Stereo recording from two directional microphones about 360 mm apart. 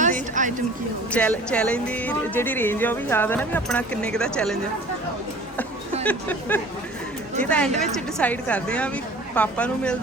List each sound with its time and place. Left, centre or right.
0.0 s a sound: right
1.1 s speech: centre
6.1 s speech: centre